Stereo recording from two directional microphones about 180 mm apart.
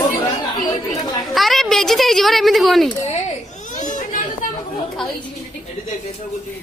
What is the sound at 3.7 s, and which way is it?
Children playing, 45° left (ahead or behind).